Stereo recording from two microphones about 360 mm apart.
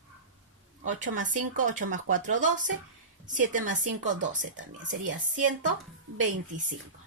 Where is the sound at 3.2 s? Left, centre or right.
Right.